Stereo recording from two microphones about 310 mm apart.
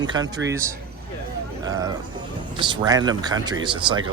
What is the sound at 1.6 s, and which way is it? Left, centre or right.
Speech, centre.